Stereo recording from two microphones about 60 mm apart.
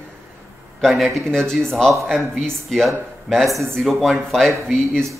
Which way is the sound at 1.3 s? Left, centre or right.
Centre.